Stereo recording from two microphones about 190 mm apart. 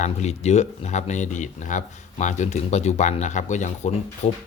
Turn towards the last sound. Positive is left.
turn(degrees=40)  # may be behind; listen again after turning